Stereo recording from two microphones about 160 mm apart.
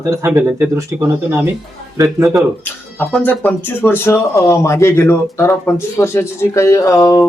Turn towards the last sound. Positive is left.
turn(degrees=20)  # may be behind; listen again after turning